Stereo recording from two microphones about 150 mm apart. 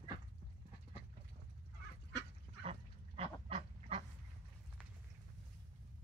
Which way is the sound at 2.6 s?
40° right (ahead or behind).